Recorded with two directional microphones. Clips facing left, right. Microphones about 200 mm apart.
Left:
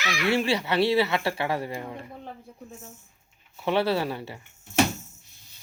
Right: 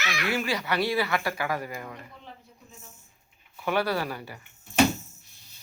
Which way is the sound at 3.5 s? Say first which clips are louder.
Left 3 dB; 25° left (ahead or behind).